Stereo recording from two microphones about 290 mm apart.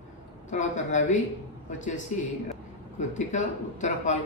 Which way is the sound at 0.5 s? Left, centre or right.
Left.